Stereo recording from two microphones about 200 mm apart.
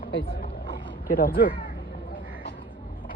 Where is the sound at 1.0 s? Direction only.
45° left (ahead or behind).